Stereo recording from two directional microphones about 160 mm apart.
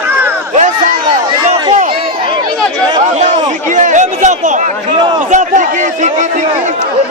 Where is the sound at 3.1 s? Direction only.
50° right (ahead or behind).